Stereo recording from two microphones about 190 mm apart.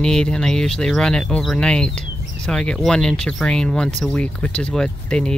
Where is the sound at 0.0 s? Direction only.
5° left (ahead or behind).